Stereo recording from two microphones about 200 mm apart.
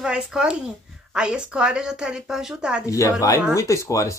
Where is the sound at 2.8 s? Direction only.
15° left (ahead or behind).